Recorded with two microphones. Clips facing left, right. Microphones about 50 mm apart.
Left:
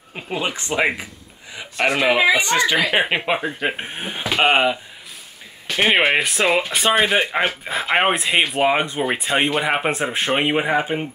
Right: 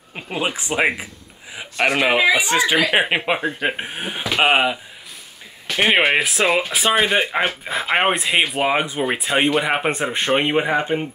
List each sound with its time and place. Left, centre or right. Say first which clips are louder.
0.1 s a man's voice: right 1 dB; centre
5.8 s speech: even; centre